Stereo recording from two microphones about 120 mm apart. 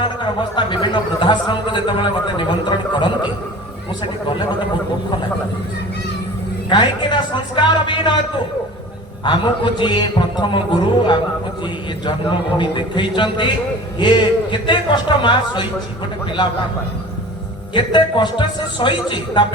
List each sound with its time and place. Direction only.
0.0 s speech: 40° left (ahead or behind)
6.7 s speech: 40° left (ahead or behind)
9.2 s speech: 40° left (ahead or behind)
12.5 s speech: 40° left (ahead or behind)
17.7 s speech: 40° left (ahead or behind)